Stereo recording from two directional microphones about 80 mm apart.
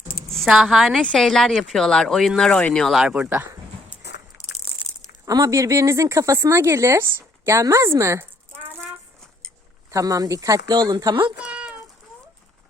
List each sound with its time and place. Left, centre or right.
0.3 s speech: centre
3.0 s speech: centre
3.2 s speech: right
5.2 s speech: right
9.9 s speech: right
11.4 s a sound: centre